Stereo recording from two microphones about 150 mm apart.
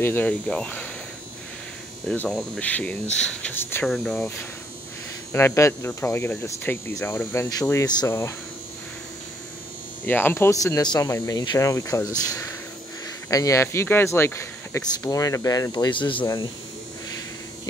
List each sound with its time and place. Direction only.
0.0 s speech: 10° left (ahead or behind)
2.0 s cricket: 5° left (ahead or behind)
2.6 s speech: 10° left (ahead or behind)
3.9 s cricket: 5° left (ahead or behind)
5.3 s speech: 20° left (ahead or behind)
10.0 s speech: 15° left (ahead or behind); by 16.3 s 35° left (ahead or behind)